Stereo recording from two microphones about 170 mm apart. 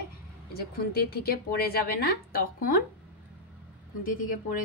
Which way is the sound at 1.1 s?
65° left (ahead or behind).